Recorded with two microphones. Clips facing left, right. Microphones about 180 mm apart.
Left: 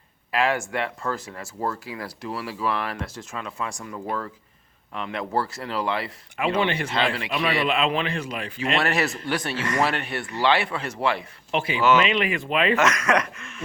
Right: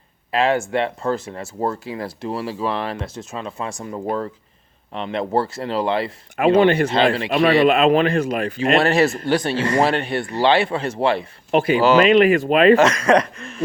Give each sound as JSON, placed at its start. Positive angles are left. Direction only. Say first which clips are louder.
{"t": 0.3, "sound": "speech", "louder": "right 5 dB", "side_deg": -25}
{"t": 6.3, "sound": "speech", "louder": "right 10 dB", "side_deg": -45}
{"t": 6.9, "sound": "speech", "louder": "right 7 dB", "side_deg": -30}
{"t": 7.6, "sound": "speech", "louder": "right 9 dB", "side_deg": -45}
{"t": 8.8, "sound": "speech", "louder": "right 8 dB", "side_deg": -30}
{"t": 11.5, "sound": "speech", "louder": "right 6 dB", "side_deg": -45}
{"t": 12.7, "sound": "speech", "louder": "right 7 dB", "side_deg": -30}